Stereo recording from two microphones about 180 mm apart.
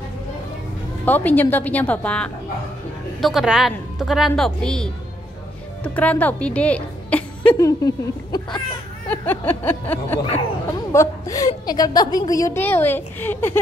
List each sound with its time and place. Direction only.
1.0 s a woman's voice: 10° left (ahead or behind)
5.9 s a woman's voice: 10° left (ahead or behind)
7.5 s speech: 20° left (ahead or behind)
9.1 s a woman's voice: 10° left (ahead or behind)